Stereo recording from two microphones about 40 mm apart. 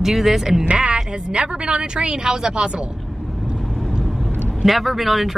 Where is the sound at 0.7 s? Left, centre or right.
Right.